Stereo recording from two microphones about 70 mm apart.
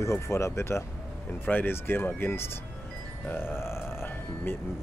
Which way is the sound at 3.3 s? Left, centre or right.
Left.